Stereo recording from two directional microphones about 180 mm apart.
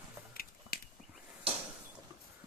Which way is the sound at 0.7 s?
60° left (ahead or behind).